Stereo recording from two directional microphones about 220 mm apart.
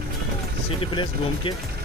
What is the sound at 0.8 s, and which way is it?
Speech, 20° left (ahead or behind).